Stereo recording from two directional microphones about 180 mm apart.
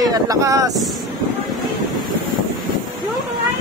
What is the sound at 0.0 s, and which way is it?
Speech, 20° right (ahead or behind).